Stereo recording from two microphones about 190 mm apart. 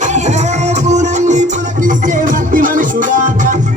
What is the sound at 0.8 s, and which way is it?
Music, 35° right (ahead or behind).